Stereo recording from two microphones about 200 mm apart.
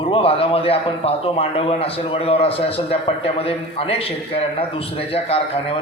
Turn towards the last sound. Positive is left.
turn(degrees=30)  # may be behind; listen again after turning